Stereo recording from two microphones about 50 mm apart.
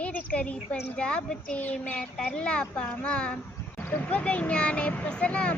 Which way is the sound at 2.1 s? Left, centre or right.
Centre.